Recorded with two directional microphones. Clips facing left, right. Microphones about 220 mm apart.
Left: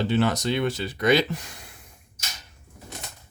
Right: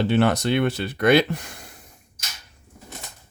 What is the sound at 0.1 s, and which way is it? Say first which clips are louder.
Speech: right 3 dB; 60° right (ahead or behind).